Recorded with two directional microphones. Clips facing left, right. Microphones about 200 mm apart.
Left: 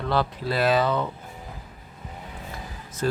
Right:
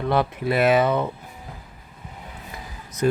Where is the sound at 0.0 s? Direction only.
20° right (ahead or behind).